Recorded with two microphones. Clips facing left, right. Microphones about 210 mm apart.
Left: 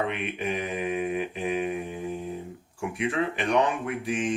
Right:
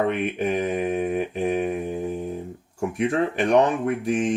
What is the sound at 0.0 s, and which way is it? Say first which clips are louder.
Speech: right 6 dB; 45° right (ahead or behind).